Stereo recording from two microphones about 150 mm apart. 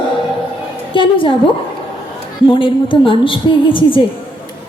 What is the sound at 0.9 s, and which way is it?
Speech, 35° left (ahead or behind).